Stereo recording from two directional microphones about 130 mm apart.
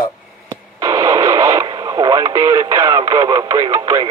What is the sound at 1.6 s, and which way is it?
Radio, 35° right (ahead or behind).